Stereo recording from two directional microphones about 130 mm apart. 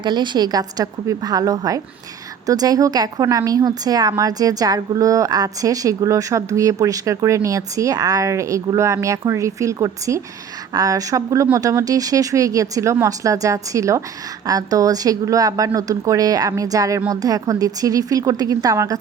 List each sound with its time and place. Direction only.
0.0 s a woman's voice: 35° right (ahead or behind)